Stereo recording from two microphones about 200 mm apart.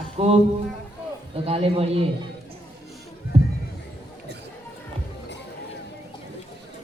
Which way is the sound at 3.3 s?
30° right (ahead or behind).